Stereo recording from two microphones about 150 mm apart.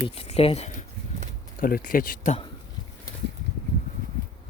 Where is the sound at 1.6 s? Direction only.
70° left (ahead or behind).